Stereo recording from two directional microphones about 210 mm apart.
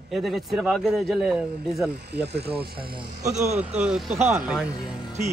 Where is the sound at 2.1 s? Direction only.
50° right (ahead or behind).